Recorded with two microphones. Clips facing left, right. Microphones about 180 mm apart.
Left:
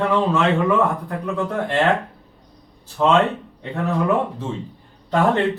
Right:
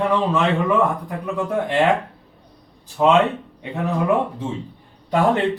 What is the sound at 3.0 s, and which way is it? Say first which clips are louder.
Speech: right 1 dB; 15° right (ahead or behind).